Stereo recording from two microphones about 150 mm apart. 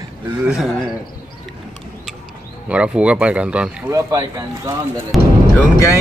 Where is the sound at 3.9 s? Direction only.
25° right (ahead or behind).